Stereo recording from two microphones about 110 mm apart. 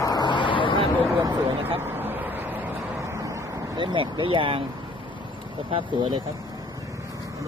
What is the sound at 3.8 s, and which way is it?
Speech, 50° right (ahead or behind).